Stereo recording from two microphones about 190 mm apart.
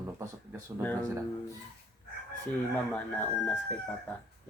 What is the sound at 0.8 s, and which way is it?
Speech, 10° left (ahead or behind).